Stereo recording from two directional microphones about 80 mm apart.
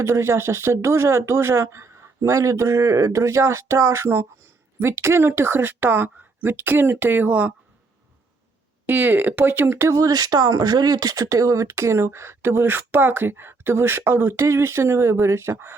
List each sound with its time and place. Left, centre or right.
0.0 s speech: right
8.9 s speech: right
9.9 s speech: right